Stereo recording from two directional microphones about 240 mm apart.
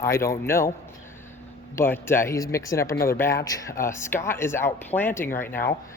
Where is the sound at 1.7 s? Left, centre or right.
Centre.